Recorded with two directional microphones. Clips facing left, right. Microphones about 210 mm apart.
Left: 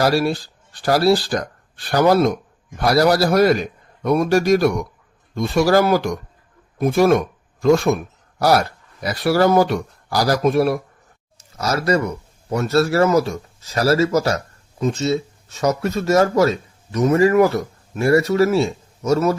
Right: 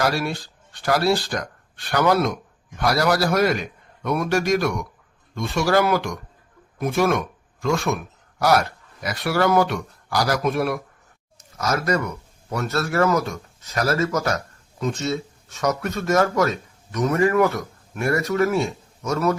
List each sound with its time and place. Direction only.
0.0 s a man's voice: 35° left (ahead or behind)